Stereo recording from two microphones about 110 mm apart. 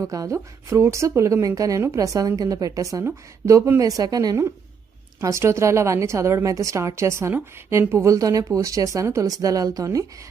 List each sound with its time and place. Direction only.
0.0 s speech: 30° right (ahead or behind)